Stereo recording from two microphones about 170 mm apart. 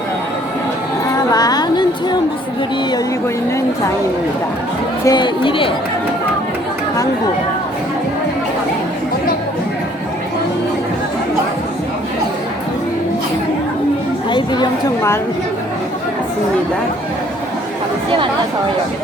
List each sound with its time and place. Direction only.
1.3 s a sound: 20° left (ahead or behind)
5.0 s speech: 25° left (ahead or behind)
14.3 s chatter: 25° left (ahead or behind)